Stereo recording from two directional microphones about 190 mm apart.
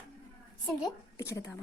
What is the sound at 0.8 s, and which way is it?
Speech, 15° left (ahead or behind).